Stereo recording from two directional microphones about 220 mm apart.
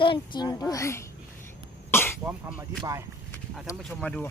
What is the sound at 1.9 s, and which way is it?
Cough, 10° left (ahead or behind).